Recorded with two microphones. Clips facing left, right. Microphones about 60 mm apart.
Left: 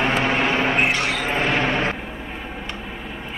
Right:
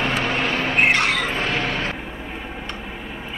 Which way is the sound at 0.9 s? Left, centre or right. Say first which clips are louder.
Right 3 dB; right.